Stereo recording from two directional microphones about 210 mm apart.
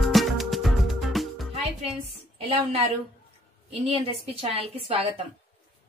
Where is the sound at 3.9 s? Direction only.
25° right (ahead or behind).